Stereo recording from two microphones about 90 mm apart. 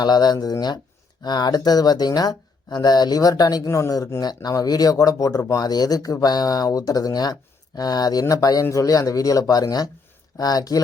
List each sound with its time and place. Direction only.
0.0 s speech: 50° left (ahead or behind)
3.7 s speech: 35° left (ahead or behind)